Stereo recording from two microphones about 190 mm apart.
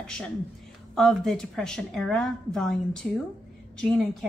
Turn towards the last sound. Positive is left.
turn(degrees=5)  # may be behind; listen again after turning